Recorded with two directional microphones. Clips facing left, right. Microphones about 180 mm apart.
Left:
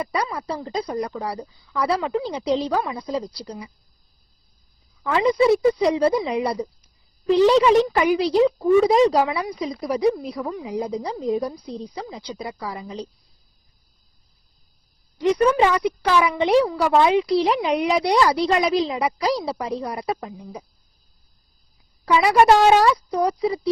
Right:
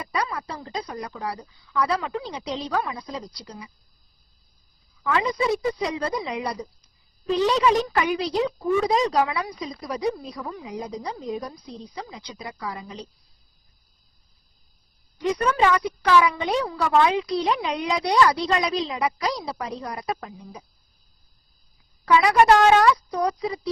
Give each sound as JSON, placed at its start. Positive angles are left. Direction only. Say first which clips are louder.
{"t": 0.0, "sound": "a woman's voice", "louder": "left 3 dB", "side_deg": 30}
{"t": 5.0, "sound": "a woman's voice", "louder": "left 6 dB", "side_deg": 30}
{"t": 10.7, "sound": "a woman's voice", "louder": "left 5 dB", "side_deg": 30}
{"t": 15.5, "sound": "a woman's voice", "louder": "left 2 dB", "side_deg": 20}
{"t": 22.0, "sound": "a woman's voice", "louder": "left 1 dB", "side_deg": 25}